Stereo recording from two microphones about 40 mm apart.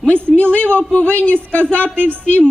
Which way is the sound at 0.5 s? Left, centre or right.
Left.